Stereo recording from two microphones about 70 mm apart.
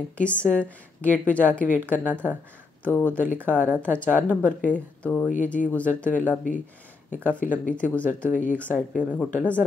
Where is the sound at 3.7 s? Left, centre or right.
Centre.